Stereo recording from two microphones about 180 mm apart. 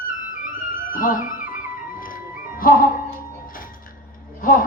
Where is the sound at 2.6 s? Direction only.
50° left (ahead or behind).